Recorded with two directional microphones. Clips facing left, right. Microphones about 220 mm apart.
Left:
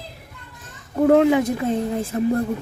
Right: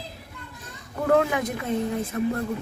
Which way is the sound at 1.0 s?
25° left (ahead or behind).